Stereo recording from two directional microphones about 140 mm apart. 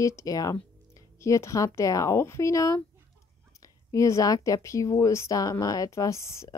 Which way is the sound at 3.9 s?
20° left (ahead or behind).